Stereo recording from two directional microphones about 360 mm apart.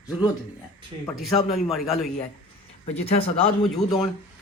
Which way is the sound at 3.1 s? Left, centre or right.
Centre.